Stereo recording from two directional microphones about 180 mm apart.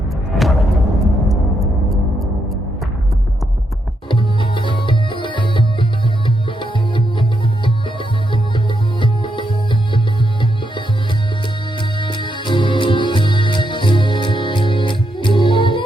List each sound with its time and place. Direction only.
0.3 s music: centre (ahead or behind)
4.1 s music: 25° left (ahead or behind)
11.8 s music: 25° left (ahead or behind)